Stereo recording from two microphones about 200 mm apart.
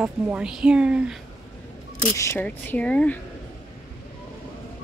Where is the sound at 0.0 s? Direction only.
5° right (ahead or behind).